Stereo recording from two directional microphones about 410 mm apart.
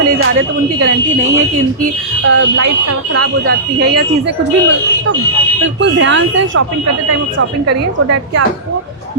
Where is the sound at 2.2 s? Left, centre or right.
Right.